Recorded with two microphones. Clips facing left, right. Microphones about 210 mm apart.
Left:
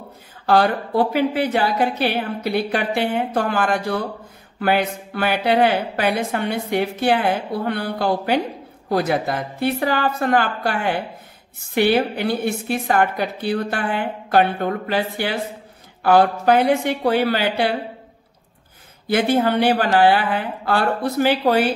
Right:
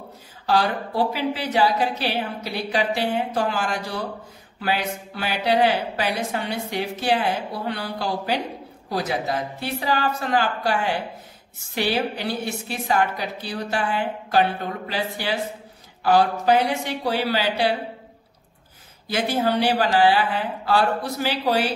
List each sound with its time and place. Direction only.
0.5 s a woman's voice: 55° left (ahead or behind)
19.0 s a woman's voice: 55° left (ahead or behind)